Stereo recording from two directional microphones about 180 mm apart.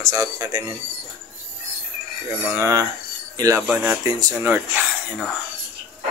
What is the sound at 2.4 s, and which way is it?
Speech, 15° right (ahead or behind).